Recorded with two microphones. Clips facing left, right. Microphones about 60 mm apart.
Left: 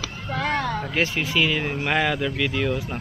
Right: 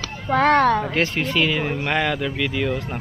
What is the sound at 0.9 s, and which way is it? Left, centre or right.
Speech, centre.